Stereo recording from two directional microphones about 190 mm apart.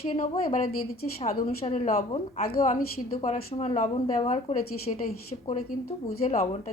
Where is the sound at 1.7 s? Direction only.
35° left (ahead or behind).